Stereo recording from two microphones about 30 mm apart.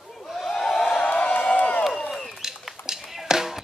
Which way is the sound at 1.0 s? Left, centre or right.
Left.